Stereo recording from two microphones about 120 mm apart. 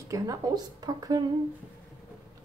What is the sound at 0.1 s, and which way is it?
Speech, 30° right (ahead or behind).